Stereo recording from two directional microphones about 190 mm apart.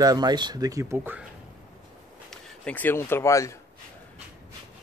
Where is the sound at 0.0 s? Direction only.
20° right (ahead or behind).